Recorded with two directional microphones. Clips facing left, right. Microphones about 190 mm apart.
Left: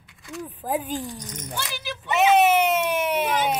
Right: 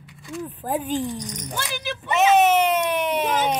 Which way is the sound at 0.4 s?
10° left (ahead or behind).